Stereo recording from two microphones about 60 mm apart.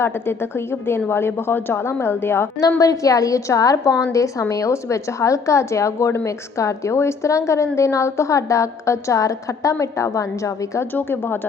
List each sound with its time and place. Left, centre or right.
0.0 s a woman's voice: left
2.6 s a woman's voice: left
10.9 s speech: left